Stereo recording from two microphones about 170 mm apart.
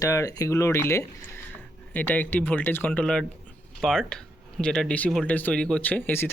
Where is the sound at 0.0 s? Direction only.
20° left (ahead or behind).